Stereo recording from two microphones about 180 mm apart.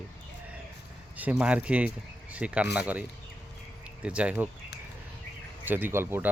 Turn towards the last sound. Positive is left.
turn(degrees=-10)  # may be behind; listen again after turning